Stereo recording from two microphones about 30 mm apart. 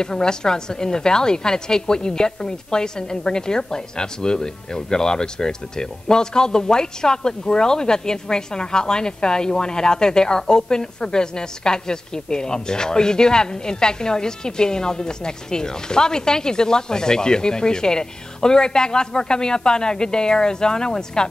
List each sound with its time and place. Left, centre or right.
0.0 s a woman's voice: left